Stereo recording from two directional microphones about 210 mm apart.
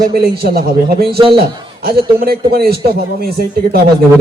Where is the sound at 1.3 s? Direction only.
50° right (ahead or behind).